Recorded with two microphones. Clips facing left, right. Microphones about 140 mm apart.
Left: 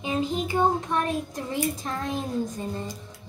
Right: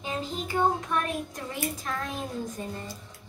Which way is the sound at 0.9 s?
25° left (ahead or behind).